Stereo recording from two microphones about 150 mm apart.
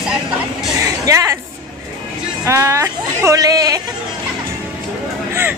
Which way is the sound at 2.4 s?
20° right (ahead or behind).